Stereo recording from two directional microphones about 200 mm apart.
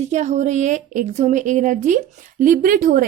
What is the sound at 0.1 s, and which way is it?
A woman's voice, 35° right (ahead or behind).